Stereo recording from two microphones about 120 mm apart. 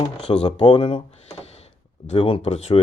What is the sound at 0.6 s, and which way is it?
Speech, 40° left (ahead or behind).